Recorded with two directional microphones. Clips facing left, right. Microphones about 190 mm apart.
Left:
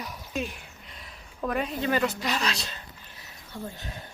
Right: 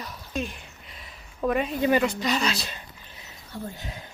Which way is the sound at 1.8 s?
15° right (ahead or behind).